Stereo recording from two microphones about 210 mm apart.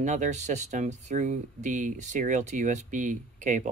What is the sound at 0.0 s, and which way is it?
Speech, 35° right (ahead or behind).